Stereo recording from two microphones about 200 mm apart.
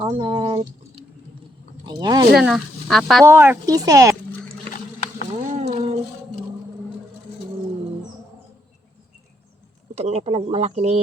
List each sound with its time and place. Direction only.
0.0 s speech: 20° right (ahead or behind)
2.3 s speech: centre (ahead or behind)
3.2 s speech: 10° right (ahead or behind)
5.5 s a sound: 35° right (ahead or behind)
9.9 s speech: 30° right (ahead or behind)